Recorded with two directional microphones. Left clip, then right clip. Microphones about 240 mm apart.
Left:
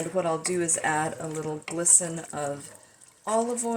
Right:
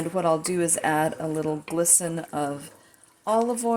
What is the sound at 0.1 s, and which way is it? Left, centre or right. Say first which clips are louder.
A woman's voice: right 4 dB; right.